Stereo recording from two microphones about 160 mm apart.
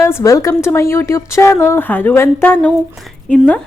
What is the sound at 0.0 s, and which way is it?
Speech, 15° left (ahead or behind).